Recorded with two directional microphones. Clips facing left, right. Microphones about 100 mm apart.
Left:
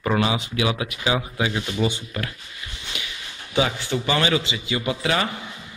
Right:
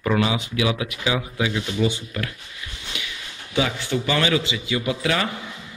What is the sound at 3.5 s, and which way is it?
A man's voice, 25° left (ahead or behind).